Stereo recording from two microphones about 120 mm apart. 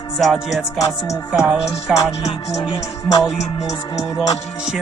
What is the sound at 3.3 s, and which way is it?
Music, 65° left (ahead or behind).